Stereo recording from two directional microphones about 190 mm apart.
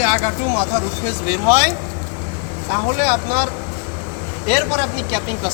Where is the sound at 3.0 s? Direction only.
15° right (ahead or behind).